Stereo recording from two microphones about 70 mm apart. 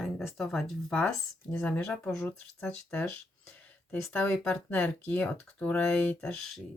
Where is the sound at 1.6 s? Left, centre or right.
Centre.